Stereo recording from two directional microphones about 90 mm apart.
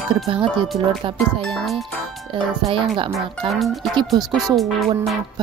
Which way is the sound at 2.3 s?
70° right (ahead or behind).